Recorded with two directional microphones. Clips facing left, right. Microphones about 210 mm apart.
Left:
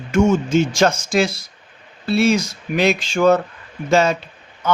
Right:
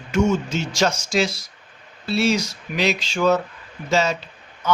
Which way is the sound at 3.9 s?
55° left (ahead or behind).